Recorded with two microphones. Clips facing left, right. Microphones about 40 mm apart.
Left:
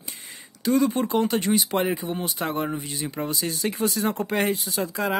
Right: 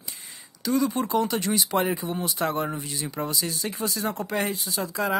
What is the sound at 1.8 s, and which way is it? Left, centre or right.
Speech, centre.